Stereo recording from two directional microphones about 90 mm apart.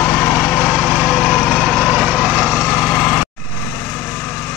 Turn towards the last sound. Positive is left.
turn(degrees=20)  # may be behind; listen again after turning